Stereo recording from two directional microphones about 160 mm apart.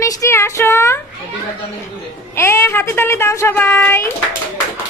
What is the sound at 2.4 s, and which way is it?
A woman's voice, 15° left (ahead or behind).